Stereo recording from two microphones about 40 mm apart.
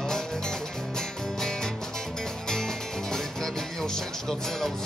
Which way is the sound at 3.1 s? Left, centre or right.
Centre.